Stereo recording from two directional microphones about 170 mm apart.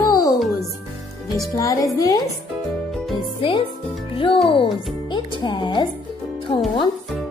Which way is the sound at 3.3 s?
30° left (ahead or behind).